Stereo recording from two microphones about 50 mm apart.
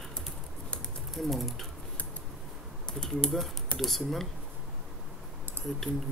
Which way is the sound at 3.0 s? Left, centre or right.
Centre.